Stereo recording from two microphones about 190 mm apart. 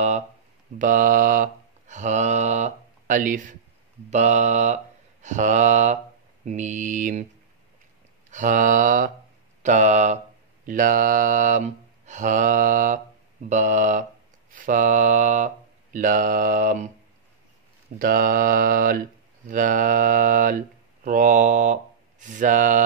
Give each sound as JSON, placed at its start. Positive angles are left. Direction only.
{"t": 0.7, "sound": "mantra", "side_deg": -45}
{"t": 8.3, "sound": "speech", "side_deg": -40}
{"t": 13.5, "sound": "mantra", "side_deg": -40}
{"t": 14.5, "sound": "speech", "side_deg": -45}
{"t": 17.9, "sound": "speech", "side_deg": -50}